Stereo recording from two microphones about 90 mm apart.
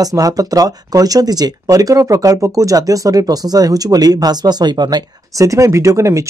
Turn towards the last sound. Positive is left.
turn(degrees=-35)  # may be behind; listen again after turning